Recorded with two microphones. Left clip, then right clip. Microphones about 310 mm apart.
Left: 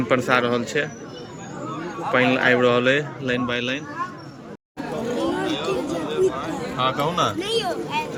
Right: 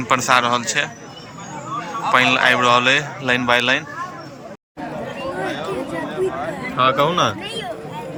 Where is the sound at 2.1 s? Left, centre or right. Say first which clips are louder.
Right 4 dB; centre.